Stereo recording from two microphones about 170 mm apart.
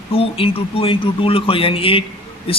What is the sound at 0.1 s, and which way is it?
A man's voice, 35° left (ahead or behind).